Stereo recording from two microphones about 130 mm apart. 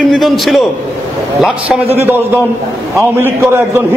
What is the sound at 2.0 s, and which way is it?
Speech, 15° right (ahead or behind).